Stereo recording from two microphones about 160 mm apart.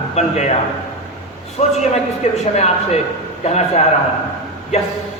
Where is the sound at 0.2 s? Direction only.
45° left (ahead or behind).